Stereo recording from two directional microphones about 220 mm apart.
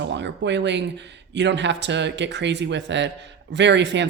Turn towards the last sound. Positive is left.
turn(degrees=-55)  # may be behind; listen again after turning